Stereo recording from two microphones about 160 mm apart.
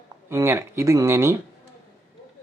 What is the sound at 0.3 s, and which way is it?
Speech, 15° right (ahead or behind).